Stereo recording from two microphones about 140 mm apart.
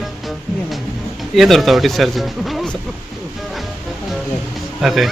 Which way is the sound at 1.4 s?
Centre (ahead or behind).